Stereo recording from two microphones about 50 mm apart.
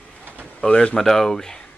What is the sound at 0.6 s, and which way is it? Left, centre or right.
Speech, centre.